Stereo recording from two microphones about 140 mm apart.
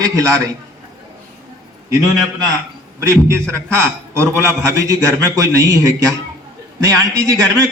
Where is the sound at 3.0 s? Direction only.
20° right (ahead or behind).